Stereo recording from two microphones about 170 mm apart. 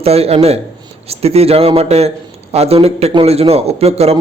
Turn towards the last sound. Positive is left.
turn(degrees=-35)  # may be behind; listen again after turning